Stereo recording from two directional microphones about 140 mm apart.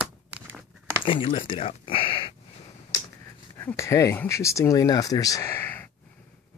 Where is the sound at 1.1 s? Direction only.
40° left (ahead or behind).